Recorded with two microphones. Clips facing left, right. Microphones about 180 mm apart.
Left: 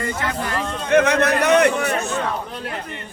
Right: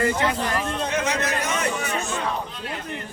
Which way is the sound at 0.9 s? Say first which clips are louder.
Left 14 dB; 60° left (ahead or behind).